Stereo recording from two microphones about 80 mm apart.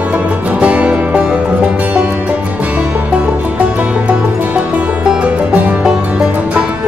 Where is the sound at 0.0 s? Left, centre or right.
Centre.